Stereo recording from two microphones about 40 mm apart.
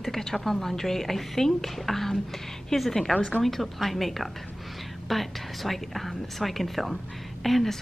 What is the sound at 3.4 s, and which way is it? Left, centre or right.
A woman's voice, centre.